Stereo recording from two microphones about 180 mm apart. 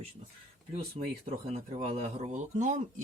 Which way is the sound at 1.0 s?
35° right (ahead or behind).